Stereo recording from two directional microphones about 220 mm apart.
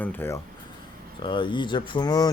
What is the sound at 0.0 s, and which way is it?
Speech, 10° left (ahead or behind).